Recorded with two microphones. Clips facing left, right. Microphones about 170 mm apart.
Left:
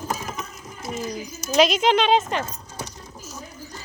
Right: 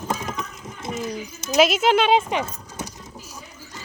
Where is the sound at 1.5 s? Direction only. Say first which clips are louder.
Right 1 dB; 5° right (ahead or behind).